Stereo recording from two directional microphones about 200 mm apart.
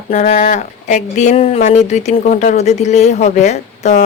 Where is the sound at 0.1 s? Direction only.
35° left (ahead or behind).